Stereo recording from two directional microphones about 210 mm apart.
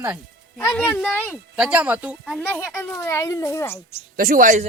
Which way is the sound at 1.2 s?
5° right (ahead or behind).